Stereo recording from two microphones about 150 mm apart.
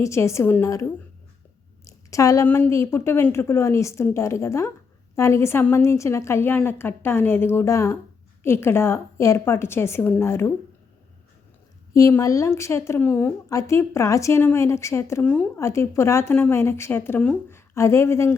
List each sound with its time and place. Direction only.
0.0 s a woman's voice: 20° left (ahead or behind)
11.9 s a woman's voice: 20° left (ahead or behind)